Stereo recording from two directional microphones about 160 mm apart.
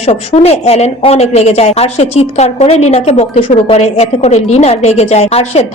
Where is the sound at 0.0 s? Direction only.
40° left (ahead or behind).